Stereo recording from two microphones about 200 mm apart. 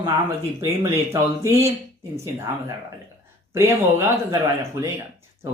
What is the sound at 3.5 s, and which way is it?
Speech, 15° right (ahead or behind).